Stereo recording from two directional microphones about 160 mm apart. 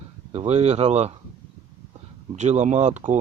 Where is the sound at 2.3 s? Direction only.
45° right (ahead or behind).